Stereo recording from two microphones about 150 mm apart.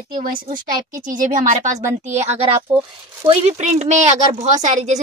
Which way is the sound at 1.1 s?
60° right (ahead or behind).